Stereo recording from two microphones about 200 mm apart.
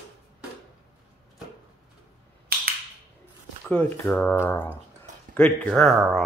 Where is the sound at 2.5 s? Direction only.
50° right (ahead or behind).